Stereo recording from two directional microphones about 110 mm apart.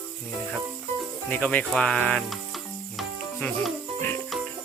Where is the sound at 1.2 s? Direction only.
15° left (ahead or behind).